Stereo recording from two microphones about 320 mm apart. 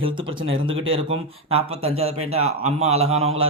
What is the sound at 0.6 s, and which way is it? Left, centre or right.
Speech, right.